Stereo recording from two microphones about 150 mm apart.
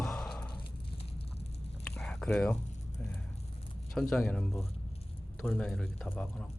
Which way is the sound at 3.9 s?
Centre (ahead or behind).